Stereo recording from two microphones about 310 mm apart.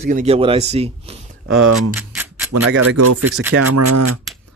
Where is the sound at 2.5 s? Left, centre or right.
Right.